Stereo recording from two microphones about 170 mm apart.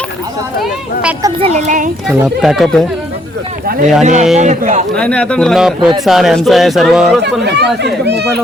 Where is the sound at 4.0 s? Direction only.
45° right (ahead or behind).